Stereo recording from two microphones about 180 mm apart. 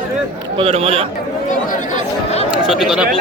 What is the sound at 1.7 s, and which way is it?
Chatter, 40° left (ahead or behind).